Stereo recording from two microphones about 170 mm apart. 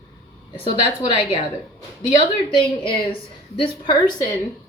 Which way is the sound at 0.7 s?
30° left (ahead or behind).